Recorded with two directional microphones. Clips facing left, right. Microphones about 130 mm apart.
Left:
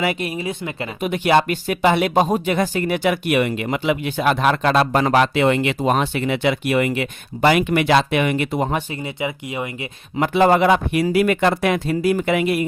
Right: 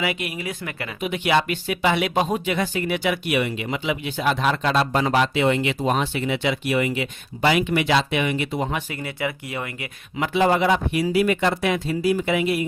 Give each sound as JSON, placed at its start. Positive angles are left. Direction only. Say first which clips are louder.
{"t": 0.0, "sound": "speech", "louder": "left 4 dB", "side_deg": 40}
{"t": 1.0, "sound": "speech", "louder": "left 4 dB", "side_deg": 45}
{"t": 8.9, "sound": "speech", "louder": "left 2 dB", "side_deg": 20}
{"t": 10.2, "sound": "speech", "louder": "left 4 dB", "side_deg": 50}